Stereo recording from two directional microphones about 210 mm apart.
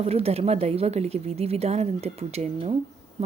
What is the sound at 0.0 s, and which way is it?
Speech, 30° right (ahead or behind).